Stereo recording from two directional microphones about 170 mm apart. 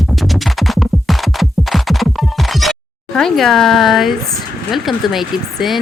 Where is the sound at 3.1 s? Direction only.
Centre (ahead or behind).